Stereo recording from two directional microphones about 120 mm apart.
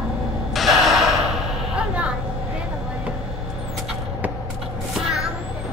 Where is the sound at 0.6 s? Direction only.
Centre (ahead or behind).